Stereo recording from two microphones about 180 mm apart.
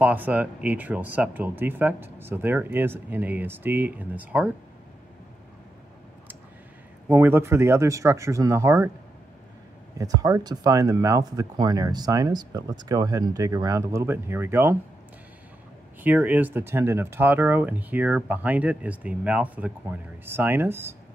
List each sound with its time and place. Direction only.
0.0 s speech: 10° right (ahead or behind)
7.1 s speech: 10° right (ahead or behind)
9.9 s speech: 20° right (ahead or behind)
16.0 s speech: 10° right (ahead or behind)